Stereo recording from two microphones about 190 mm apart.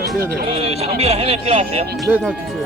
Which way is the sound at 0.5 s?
30° right (ahead or behind).